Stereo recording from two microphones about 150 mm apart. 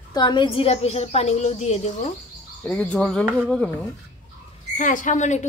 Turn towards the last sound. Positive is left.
turn(degrees=55)  # may be behind; listen again after turning